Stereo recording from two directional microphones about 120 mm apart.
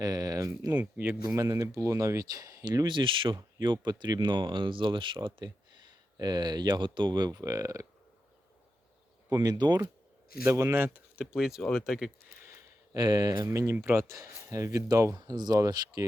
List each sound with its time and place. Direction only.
0.0 s speech: 30° right (ahead or behind)
0.7 s speech: 15° right (ahead or behind)
9.3 s speech: 35° right (ahead or behind)
10.4 s speech: 20° right (ahead or behind); by 12.1 s 5° right (ahead or behind)
13.0 s speech: 35° right (ahead or behind)